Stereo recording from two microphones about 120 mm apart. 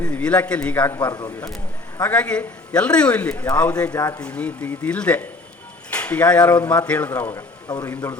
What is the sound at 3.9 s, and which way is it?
Speech, 30° left (ahead or behind).